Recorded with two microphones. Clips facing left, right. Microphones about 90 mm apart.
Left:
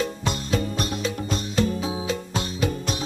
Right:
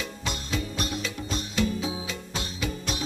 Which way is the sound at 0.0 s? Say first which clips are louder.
Left 7 dB; 45° left (ahead or behind).